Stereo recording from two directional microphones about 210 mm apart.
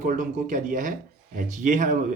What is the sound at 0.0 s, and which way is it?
Speech, 40° right (ahead or behind).